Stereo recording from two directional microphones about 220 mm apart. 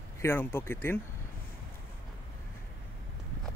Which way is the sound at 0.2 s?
10° left (ahead or behind).